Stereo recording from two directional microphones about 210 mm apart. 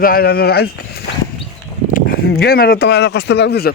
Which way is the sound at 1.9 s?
45° left (ahead or behind).